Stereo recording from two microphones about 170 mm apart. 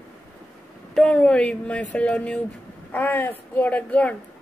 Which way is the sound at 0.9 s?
5° left (ahead or behind).